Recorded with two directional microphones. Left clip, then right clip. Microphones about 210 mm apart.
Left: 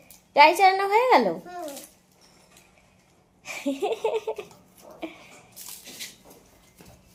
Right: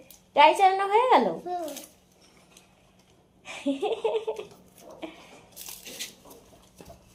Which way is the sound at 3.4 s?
20° left (ahead or behind).